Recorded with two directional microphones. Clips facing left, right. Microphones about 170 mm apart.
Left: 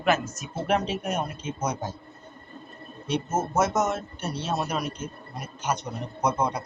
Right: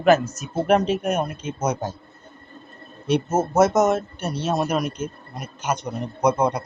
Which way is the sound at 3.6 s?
75° right (ahead or behind).